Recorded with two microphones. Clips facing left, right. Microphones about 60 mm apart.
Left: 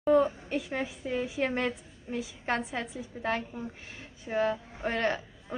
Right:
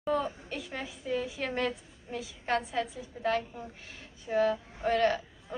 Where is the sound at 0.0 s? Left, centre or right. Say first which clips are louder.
Left 7 dB; left.